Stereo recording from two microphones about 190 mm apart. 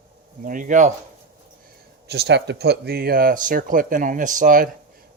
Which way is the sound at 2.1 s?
60° right (ahead or behind).